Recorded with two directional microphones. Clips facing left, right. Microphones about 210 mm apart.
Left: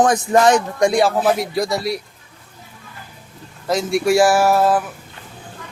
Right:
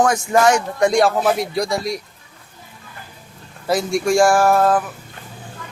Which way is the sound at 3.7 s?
Centre (ahead or behind).